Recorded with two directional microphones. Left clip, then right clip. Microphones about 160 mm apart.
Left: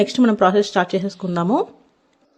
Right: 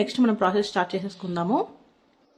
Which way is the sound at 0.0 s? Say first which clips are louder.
Left 7 dB; 35° left (ahead or behind).